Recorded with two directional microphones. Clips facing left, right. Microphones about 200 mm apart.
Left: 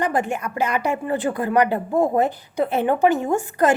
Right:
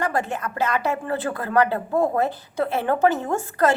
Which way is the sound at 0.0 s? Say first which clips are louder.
Left 2 dB; 15° left (ahead or behind).